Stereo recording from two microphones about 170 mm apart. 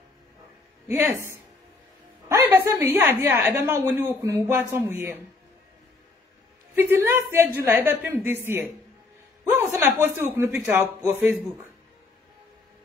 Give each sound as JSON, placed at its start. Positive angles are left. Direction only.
{"t": 0.8, "sound": "a woman's voice", "side_deg": -15}
{"t": 2.2, "sound": "a woman's voice", "side_deg": -15}
{"t": 6.7, "sound": "a woman's voice", "side_deg": -10}